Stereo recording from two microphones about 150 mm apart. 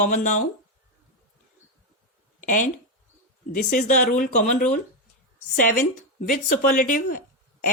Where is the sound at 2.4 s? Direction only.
60° left (ahead or behind).